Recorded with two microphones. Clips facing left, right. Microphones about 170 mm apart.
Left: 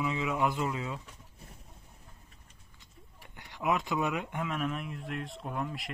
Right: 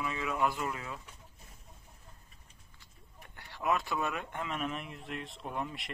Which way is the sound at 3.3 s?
15° left (ahead or behind).